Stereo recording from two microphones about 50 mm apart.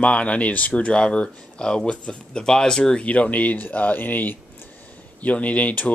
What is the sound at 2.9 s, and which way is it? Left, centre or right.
A man's voice, left.